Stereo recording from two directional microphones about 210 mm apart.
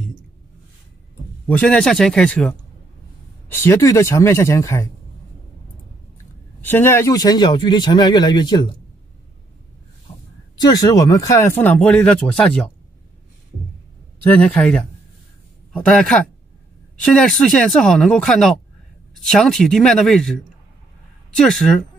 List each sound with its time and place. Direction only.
1.5 s speech: 5° left (ahead or behind)
6.6 s speech: 10° left (ahead or behind)
10.1 s a sound: 30° left (ahead or behind)
10.6 s speech: 20° left (ahead or behind)
14.2 s speech: 5° left (ahead or behind)
21.4 s speech: 5° left (ahead or behind)